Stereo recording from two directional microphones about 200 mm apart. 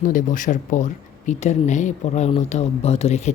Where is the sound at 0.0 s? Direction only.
40° left (ahead or behind).